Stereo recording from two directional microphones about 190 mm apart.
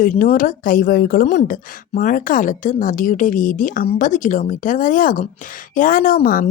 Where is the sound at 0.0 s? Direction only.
50° left (ahead or behind).